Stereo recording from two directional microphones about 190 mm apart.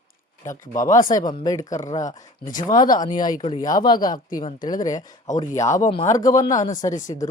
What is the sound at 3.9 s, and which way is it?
Speech, 45° left (ahead or behind).